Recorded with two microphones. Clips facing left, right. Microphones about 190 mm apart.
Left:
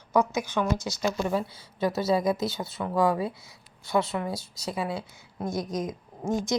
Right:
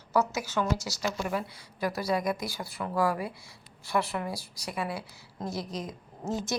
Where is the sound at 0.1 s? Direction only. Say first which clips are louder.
Left 3 dB; 15° left (ahead or behind).